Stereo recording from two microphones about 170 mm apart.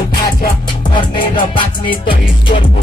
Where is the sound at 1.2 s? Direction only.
30° left (ahead or behind).